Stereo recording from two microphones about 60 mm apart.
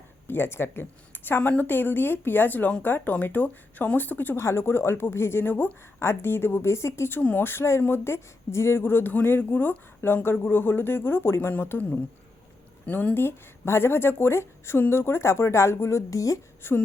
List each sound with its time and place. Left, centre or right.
0.3 s speech: left
4.4 s a woman's voice: left
7.2 s speech: left
7.4 s a woman's voice: left
12.8 s speech: left
13.1 s a woman's voice: left
16.6 s speech: left